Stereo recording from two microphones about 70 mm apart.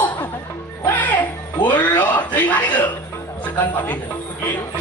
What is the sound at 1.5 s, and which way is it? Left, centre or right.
Speech, left.